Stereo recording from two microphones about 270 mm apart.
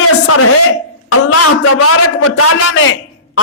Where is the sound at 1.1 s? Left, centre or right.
Left.